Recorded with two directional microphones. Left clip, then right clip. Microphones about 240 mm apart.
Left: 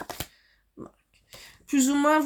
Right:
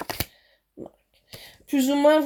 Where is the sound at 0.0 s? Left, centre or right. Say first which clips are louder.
Right 5 dB; right.